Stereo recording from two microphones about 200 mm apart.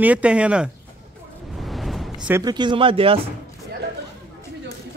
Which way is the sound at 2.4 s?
20° right (ahead or behind).